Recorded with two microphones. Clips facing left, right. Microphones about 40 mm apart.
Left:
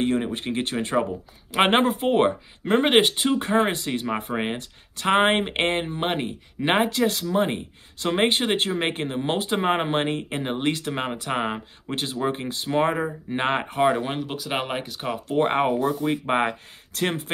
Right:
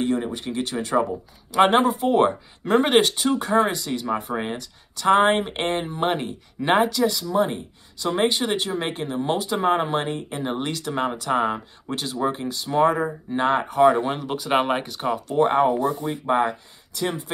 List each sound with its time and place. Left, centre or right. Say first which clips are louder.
0.0 s speech: even; left
2.2 s speech: right 1 dB; left
5.9 s speech: right 2 dB; left
14.0 s speech: right 2 dB; centre
14.3 s speech: right 6 dB; centre
15.2 s speech: right 2 dB; left
16.3 s speech: right 2 dB; left